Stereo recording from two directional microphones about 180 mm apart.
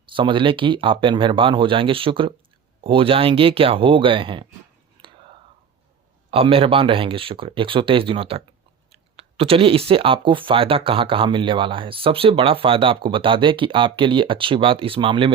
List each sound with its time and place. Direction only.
0.1 s speech: 25° right (ahead or behind)
6.3 s speech: 30° right (ahead or behind)